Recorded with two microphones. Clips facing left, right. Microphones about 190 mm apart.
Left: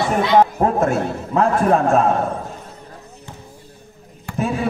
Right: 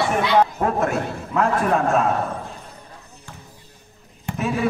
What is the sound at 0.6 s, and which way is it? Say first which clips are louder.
A man's voice: left 4 dB; 35° left (ahead or behind).